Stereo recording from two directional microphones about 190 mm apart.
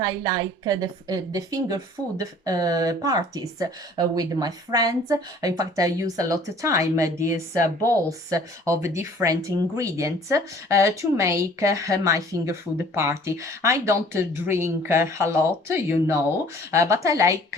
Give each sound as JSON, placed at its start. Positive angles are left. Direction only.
{"t": 0.0, "sound": "a woman's voice", "side_deg": -20}